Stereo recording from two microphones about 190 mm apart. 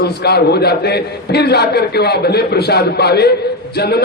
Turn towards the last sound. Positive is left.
turn(degrees=60)  # may be behind; listen again after turning